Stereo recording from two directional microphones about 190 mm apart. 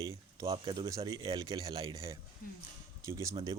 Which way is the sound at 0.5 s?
25° right (ahead or behind).